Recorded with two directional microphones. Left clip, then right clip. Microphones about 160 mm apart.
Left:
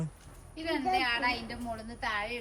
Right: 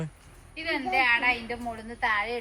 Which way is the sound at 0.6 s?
20° right (ahead or behind).